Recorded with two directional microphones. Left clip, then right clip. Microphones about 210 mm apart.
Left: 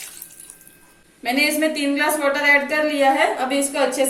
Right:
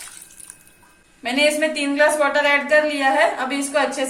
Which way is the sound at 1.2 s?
30° right (ahead or behind).